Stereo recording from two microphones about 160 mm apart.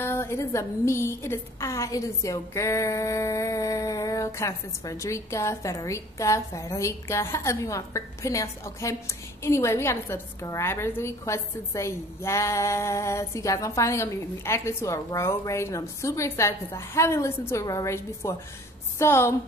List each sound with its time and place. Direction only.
0.0 s a woman's voice: 15° left (ahead or behind)